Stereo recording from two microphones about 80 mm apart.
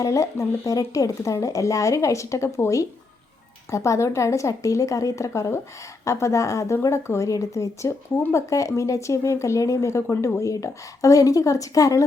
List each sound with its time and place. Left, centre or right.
0.0 s speech: left